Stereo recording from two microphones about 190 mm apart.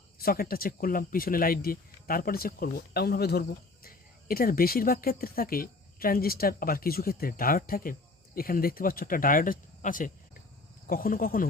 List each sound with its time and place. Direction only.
0.2 s speech: 50° left (ahead or behind)